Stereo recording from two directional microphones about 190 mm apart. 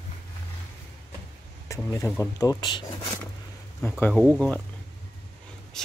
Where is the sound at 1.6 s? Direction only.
15° left (ahead or behind).